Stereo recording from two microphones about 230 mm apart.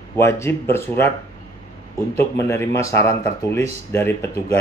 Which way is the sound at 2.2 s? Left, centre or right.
Centre.